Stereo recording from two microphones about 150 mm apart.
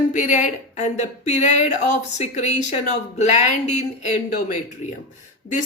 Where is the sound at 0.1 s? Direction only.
55° left (ahead or behind).